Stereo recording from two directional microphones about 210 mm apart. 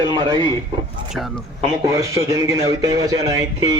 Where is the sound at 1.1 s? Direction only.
Centre (ahead or behind).